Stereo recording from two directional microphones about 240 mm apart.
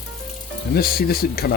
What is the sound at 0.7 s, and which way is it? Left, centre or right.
Speech, left.